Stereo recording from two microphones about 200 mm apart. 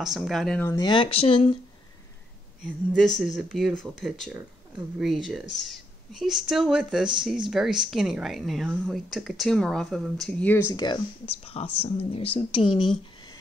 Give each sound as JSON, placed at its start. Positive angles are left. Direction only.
{"t": 0.0, "sound": "a woman's voice", "side_deg": 0}
{"t": 0.7, "sound": "speech", "side_deg": 20}
{"t": 2.6, "sound": "a woman's voice", "side_deg": 5}